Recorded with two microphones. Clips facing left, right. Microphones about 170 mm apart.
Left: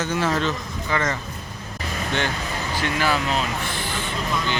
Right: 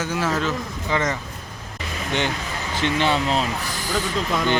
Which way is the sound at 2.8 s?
25° right (ahead or behind).